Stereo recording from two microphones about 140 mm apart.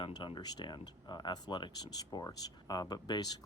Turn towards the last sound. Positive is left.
turn(degrees=30)  # may be behind; listen again after turning